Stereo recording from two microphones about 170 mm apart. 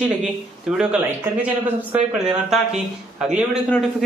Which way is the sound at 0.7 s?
10° right (ahead or behind).